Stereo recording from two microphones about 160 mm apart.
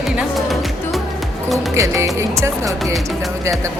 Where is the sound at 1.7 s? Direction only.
20° right (ahead or behind).